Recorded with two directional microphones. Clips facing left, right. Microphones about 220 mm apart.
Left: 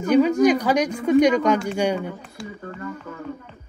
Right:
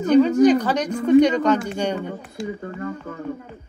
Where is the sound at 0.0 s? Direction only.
10° left (ahead or behind).